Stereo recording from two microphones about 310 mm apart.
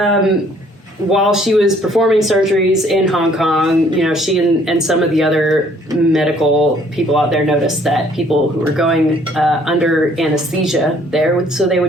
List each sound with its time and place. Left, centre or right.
0.0 s speech: centre
9.4 s speech: centre